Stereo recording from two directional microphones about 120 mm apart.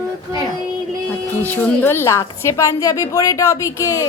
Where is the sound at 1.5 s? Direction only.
20° left (ahead or behind).